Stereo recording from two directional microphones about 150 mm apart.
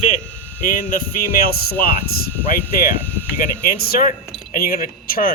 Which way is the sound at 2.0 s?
90° left.